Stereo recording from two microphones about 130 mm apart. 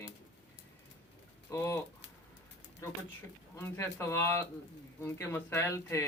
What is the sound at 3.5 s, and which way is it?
Speech, 20° left (ahead or behind).